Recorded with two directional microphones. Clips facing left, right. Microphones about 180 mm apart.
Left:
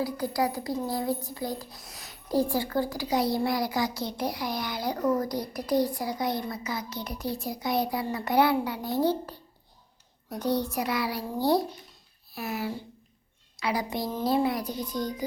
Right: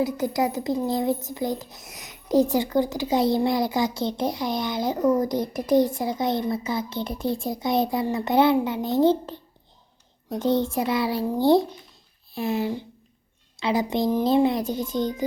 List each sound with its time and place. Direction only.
0.0 s a child's voice: 20° right (ahead or behind)